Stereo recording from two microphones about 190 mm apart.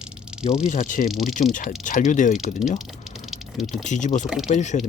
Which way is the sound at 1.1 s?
Centre (ahead or behind).